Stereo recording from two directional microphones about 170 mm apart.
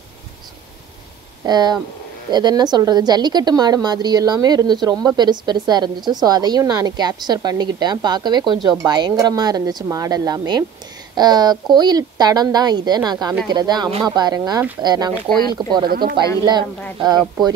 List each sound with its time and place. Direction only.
1.4 s a woman's voice: 25° right (ahead or behind)
15.9 s speech: 60° right (ahead or behind)